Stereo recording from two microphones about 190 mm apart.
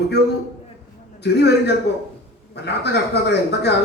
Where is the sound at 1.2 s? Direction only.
65° left (ahead or behind).